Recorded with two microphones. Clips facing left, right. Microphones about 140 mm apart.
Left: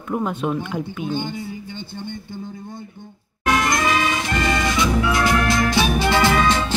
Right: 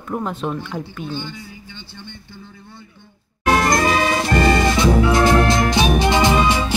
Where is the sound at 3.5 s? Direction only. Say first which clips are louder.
Right 3 dB; 40° right (ahead or behind); by 6.6 s 15° right (ahead or behind).